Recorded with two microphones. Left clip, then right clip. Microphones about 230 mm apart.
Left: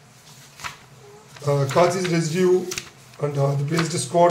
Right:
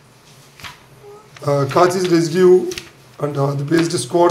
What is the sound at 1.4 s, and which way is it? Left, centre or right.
Speech, right.